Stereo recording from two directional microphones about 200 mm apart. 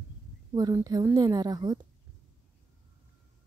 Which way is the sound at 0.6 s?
20° right (ahead or behind).